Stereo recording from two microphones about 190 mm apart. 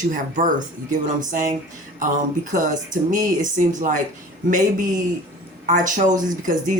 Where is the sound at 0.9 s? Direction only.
40° right (ahead or behind).